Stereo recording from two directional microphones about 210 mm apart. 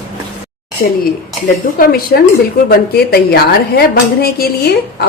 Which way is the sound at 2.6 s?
45° left (ahead or behind).